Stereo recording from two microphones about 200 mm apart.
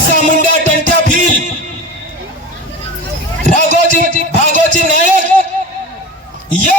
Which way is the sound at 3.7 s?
40° right (ahead or behind).